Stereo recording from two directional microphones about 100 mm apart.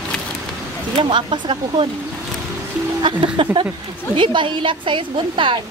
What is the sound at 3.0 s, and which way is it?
A woman's voice, 55° right (ahead or behind).